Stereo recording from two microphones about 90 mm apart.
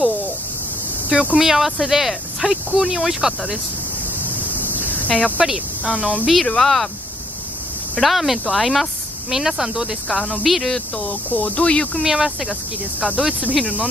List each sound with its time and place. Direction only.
1.0 s speech: 15° right (ahead or behind)
4.6 s a sound: 20° left (ahead or behind)
5.4 s speech: 10° right (ahead or behind)
6.2 s speech: centre (ahead or behind)
8.0 s speech: centre (ahead or behind)
11.0 s speech: 15° left (ahead or behind)
12.0 s speech: 5° right (ahead or behind)